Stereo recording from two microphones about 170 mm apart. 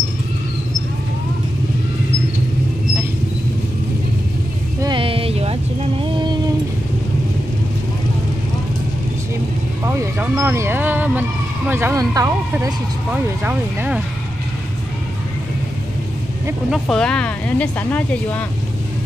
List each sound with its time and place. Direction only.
4.7 s a sound: 25° right (ahead or behind)
9.8 s vehicle: 15° right (ahead or behind)
13.1 s speech: 10° right (ahead or behind)
16.7 s speech: 5° left (ahead or behind)